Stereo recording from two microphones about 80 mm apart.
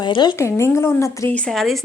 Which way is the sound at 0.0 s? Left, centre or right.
Left.